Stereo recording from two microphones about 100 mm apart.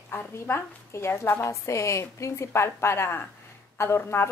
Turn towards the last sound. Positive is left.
turn(degrees=25)  # may be behind; listen again after turning